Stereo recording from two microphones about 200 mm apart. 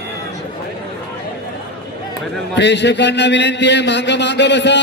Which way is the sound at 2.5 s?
60° left (ahead or behind).